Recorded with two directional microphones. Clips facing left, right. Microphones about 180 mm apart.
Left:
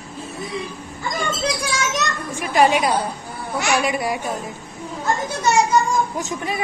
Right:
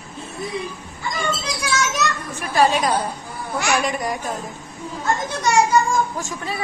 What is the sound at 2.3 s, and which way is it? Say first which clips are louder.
Speech: left 2 dB; 15° left (ahead or behind).